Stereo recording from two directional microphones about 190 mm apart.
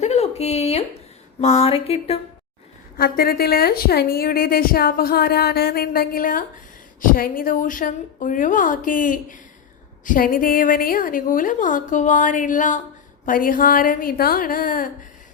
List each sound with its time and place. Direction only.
0.0 s a sound: 35° left (ahead or behind)
1.4 s speech: 35° left (ahead or behind)
3.0 s a woman's voice: 55° left (ahead or behind)